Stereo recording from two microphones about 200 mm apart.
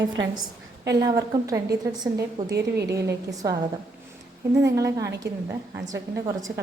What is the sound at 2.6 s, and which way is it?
Speech, 55° right (ahead or behind).